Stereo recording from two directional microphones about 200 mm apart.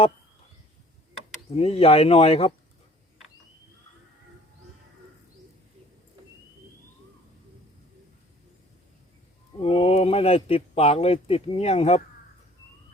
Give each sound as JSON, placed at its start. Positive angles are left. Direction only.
{"t": 1.5, "sound": "speech", "side_deg": 30}
{"t": 9.6, "sound": "speech", "side_deg": 30}